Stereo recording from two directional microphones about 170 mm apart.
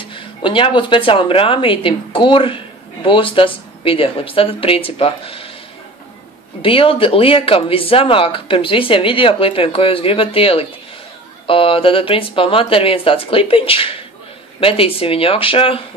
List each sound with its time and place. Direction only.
0.0 s speech: 30° left (ahead or behind)
6.6 s speech: 30° left (ahead or behind)